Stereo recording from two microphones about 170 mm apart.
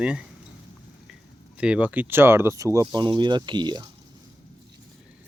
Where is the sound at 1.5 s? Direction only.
5° right (ahead or behind); by 3.8 s 25° right (ahead or behind).